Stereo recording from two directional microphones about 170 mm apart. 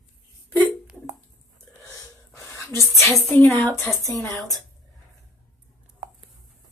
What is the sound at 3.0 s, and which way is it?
A woman's voice, 15° left (ahead or behind).